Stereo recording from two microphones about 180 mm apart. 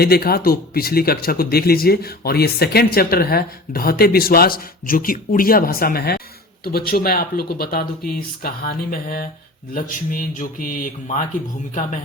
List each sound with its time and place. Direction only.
0.0 s speech: 60° left (ahead or behind); by 11.9 s 45° left (ahead or behind)